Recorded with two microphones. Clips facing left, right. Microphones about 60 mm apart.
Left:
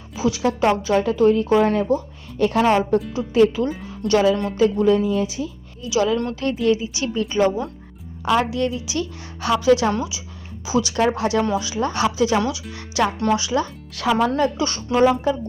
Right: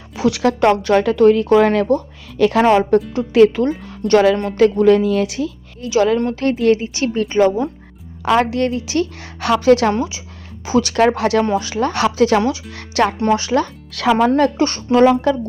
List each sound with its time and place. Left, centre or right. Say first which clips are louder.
0.2 s speech: right 5 dB; right
2.4 s a woman's voice: right 5 dB; right
2.9 s speech: right 5 dB; right
3.8 s speech: right 4 dB; right
5.9 s speech: right 5 dB; right
8.2 s a woman's voice: right 4 dB; right
9.9 s a woman's voice: right 4 dB; right
10.7 s a woman's voice: right 5 dB; right
11.5 s a woman's voice: right 4 dB; right
13.9 s speech: right 4 dB; right
14.3 s speech: right 5 dB; right
14.9 s a woman's voice: right 5 dB; right